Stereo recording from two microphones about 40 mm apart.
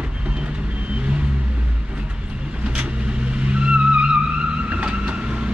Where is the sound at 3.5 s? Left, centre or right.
Right.